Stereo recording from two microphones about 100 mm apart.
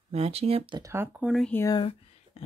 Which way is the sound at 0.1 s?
90° right.